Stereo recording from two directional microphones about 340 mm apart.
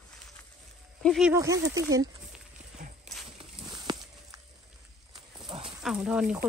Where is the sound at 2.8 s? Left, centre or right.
Right.